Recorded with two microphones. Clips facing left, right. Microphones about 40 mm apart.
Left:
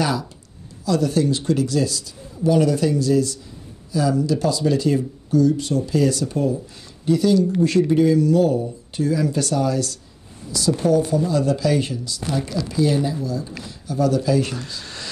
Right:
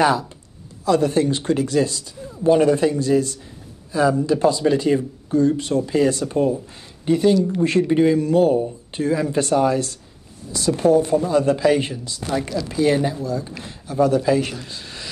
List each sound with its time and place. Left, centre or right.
0.0 s speech: right
14.4 s speech: centre